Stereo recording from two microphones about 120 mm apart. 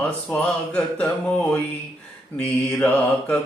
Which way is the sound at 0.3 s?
10° left (ahead or behind).